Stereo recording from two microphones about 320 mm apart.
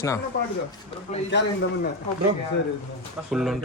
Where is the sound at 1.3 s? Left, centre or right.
Left.